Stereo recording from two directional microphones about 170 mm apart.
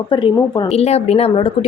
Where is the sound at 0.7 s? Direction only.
40° left (ahead or behind).